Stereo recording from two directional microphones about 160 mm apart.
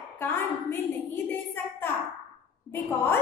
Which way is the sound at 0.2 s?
15° left (ahead or behind).